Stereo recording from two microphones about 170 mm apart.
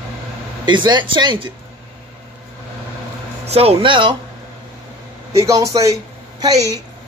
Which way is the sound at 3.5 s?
35° right (ahead or behind).